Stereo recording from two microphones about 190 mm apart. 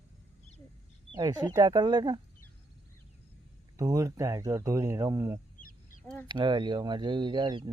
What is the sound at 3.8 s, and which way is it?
Speech, 20° right (ahead or behind).